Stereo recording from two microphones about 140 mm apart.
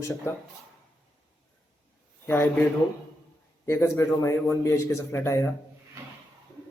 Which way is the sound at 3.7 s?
20° left (ahead or behind).